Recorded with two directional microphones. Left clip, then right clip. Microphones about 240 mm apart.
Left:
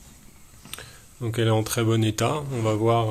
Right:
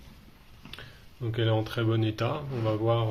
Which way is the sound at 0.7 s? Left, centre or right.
Left.